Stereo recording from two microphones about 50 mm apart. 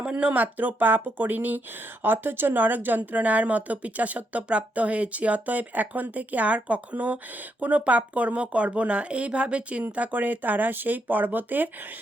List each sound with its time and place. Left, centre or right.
0.0 s a woman's voice: right